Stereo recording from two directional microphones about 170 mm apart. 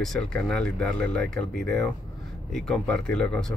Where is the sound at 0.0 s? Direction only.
5° left (ahead or behind).